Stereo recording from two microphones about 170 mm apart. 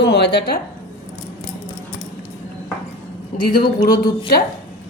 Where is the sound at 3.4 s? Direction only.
60° left (ahead or behind).